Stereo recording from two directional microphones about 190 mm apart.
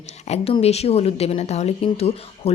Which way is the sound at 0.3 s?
30° left (ahead or behind).